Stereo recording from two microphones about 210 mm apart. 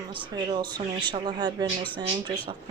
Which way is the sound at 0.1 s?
25° right (ahead or behind).